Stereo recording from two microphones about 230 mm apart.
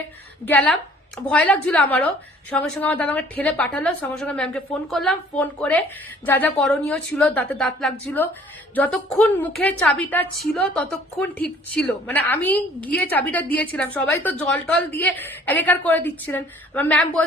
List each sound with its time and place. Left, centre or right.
0.4 s a woman's voice: centre